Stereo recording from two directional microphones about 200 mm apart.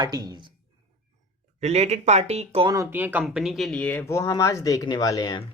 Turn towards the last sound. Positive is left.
turn(degrees=20)  # may be behind; listen again after turning